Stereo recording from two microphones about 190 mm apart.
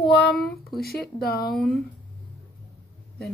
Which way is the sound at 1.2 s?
55° left (ahead or behind).